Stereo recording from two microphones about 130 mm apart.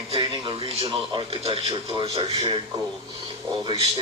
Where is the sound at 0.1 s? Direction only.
40° right (ahead or behind).